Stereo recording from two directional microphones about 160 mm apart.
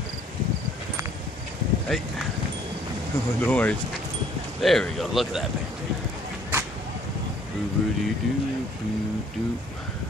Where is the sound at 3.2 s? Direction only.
15° left (ahead or behind).